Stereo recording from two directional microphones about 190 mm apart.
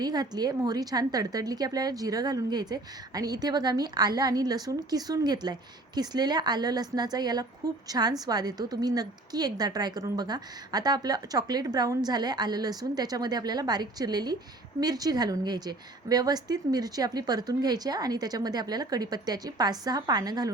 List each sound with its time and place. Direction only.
0.0 s a woman's voice: 20° right (ahead or behind)